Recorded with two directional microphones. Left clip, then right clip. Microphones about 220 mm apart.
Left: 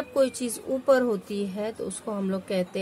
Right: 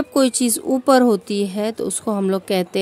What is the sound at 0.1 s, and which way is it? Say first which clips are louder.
A woman's voice: right 6 dB; 50° right (ahead or behind).